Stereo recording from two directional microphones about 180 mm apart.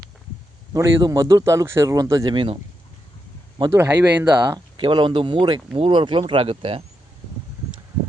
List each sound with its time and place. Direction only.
0.7 s speech: 20° right (ahead or behind)
3.6 s speech: 15° right (ahead or behind)
4.8 s speech: 25° right (ahead or behind)